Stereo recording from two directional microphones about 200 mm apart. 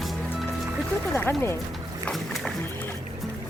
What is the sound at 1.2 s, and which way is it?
Speech, 10° left (ahead or behind).